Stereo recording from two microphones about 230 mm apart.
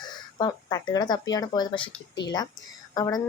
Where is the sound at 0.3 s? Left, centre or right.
Centre.